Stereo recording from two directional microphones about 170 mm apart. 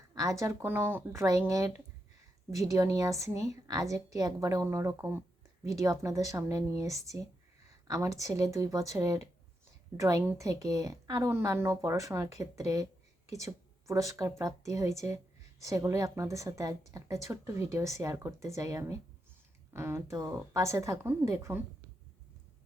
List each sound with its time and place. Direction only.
0.1 s a woman's voice: 20° right (ahead or behind)